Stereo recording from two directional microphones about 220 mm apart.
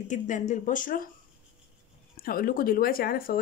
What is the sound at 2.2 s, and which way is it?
Speech, 40° left (ahead or behind).